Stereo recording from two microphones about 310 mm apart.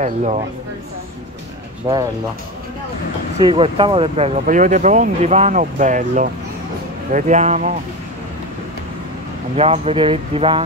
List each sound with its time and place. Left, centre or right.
0.0 s speech: right
1.9 s speech: centre
3.3 s speech: centre
9.6 s speech: centre